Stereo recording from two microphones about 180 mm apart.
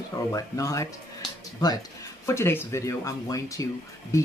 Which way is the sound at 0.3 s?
20° left (ahead or behind).